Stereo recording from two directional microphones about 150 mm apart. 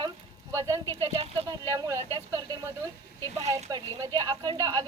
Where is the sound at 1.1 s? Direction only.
40° right (ahead or behind).